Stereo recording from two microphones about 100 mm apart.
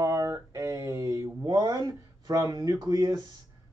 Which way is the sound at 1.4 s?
40° right (ahead or behind).